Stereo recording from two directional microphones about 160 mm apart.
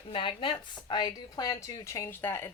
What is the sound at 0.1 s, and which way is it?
Speech, 30° left (ahead or behind).